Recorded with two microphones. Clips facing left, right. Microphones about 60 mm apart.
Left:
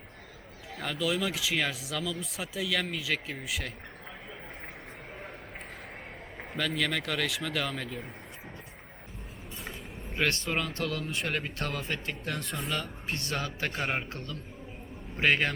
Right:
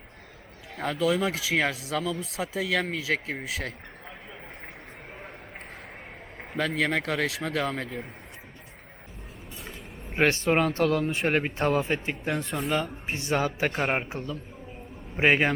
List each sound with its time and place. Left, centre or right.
0.8 s speech: right
6.6 s speech: right
10.5 s speech: right
11.5 s a man's voice: right